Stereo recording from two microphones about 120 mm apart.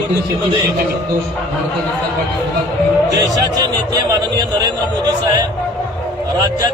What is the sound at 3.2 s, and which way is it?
Speech, 30° right (ahead or behind).